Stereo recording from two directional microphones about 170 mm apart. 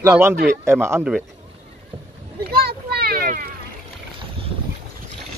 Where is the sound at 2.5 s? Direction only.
65° right (ahead or behind).